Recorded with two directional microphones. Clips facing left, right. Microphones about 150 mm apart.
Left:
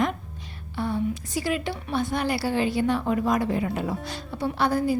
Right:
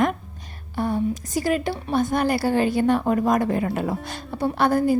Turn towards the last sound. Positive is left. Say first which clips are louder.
# right 4 dB
turn(degrees=-50)  # may be behind; listen again after turning